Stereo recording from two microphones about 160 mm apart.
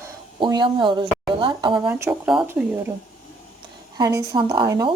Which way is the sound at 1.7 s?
10° right (ahead or behind).